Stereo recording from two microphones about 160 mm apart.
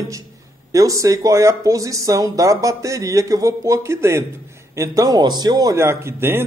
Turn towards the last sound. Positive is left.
turn(degrees=-15)  # may be behind; listen again after turning